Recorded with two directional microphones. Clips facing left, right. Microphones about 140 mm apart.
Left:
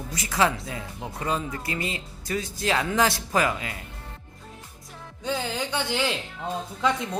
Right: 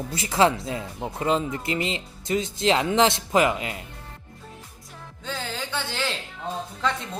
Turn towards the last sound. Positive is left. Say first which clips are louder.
# left 2 dB
turn(degrees=15)  # may be behind; listen again after turning